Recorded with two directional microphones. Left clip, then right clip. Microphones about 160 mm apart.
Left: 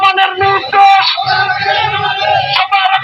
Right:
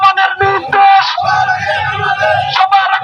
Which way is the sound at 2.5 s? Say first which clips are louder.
Right 3 dB; 10° right (ahead or behind).